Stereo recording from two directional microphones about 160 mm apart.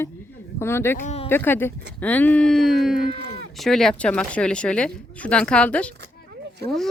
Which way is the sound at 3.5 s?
Centre (ahead or behind).